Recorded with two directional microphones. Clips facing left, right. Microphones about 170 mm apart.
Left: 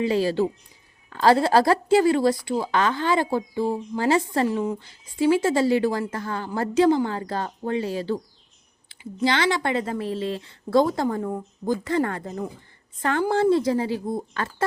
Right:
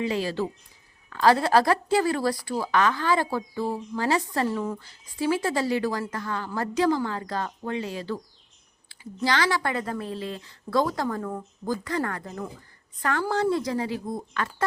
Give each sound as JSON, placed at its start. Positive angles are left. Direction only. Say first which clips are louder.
{"t": 0.0, "sound": "a woman's voice", "louder": "left 5 dB", "side_deg": 30}
{"t": 4.4, "sound": "speech", "louder": "left 3 dB", "side_deg": 10}
{"t": 5.2, "sound": "a woman's voice", "louder": "left 5 dB", "side_deg": 25}